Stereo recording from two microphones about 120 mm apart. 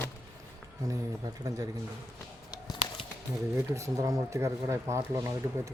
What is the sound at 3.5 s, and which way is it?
Speech, 25° right (ahead or behind).